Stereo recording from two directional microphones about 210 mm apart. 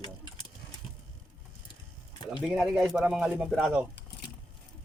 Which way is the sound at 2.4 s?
5° right (ahead or behind).